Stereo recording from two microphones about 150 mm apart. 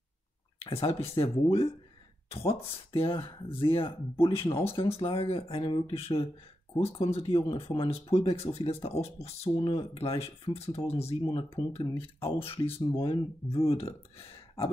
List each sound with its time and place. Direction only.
0.6 s speech: 40° left (ahead or behind)
2.3 s speech: 40° left (ahead or behind)